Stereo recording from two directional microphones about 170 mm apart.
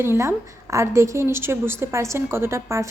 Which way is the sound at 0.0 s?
15° right (ahead or behind).